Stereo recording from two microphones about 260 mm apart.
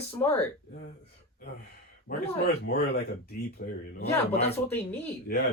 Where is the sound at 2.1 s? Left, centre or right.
Left.